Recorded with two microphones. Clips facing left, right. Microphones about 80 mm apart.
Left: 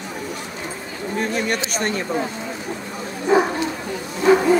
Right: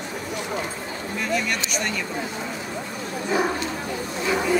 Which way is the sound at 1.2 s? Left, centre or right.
Left.